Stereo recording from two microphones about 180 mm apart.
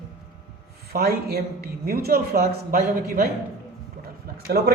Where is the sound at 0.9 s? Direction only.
60° right (ahead or behind).